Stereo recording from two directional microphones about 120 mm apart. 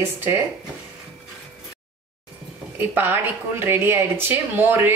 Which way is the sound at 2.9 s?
15° right (ahead or behind).